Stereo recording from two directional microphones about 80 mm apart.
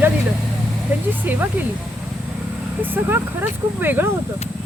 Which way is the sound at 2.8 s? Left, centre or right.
Right.